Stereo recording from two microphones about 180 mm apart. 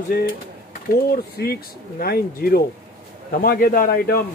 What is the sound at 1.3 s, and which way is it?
A man's voice, 60° left (ahead or behind).